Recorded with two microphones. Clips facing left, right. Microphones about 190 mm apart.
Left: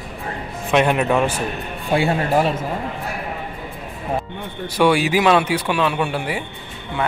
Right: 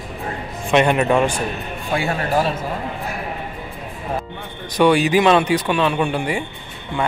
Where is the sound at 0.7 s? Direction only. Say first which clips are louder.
Right 1 dB; centre (ahead or behind).